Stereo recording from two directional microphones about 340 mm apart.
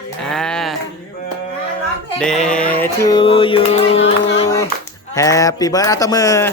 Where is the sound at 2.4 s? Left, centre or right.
Centre.